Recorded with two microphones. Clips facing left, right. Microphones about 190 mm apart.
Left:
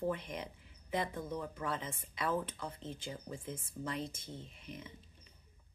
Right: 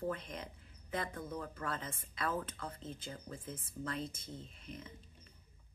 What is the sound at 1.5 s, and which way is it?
A woman's voice, 10° left (ahead or behind).